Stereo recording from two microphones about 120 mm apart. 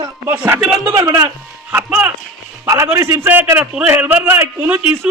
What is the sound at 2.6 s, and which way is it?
A man's voice, 25° right (ahead or behind).